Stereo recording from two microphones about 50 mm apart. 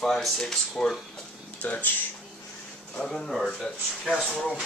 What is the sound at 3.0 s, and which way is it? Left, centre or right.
Speech, centre.